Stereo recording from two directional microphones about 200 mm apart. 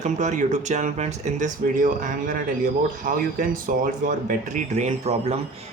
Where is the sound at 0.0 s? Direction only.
35° right (ahead or behind).